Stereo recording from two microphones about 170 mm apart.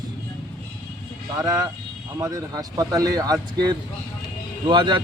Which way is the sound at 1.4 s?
20° right (ahead or behind).